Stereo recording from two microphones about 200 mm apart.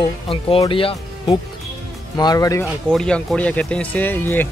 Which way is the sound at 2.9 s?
5° left (ahead or behind).